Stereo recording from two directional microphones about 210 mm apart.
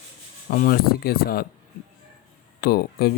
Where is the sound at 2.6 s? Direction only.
45° left (ahead or behind).